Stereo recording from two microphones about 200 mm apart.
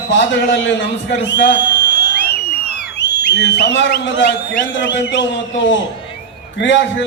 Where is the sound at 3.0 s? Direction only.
60° left (ahead or behind).